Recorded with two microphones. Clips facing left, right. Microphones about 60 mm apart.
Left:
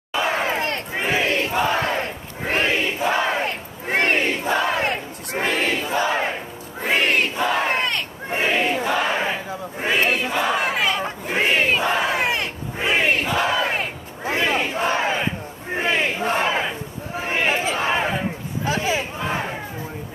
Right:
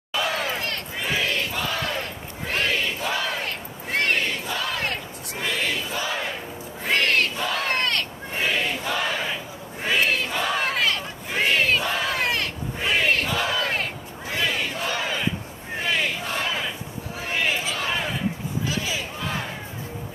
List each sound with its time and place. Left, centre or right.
0.1 s battle cry: left
5.3 s a sound: left
6.8 s battle cry: centre
8.3 s a sound: left
8.8 s battle cry: left
14.2 s crowd: left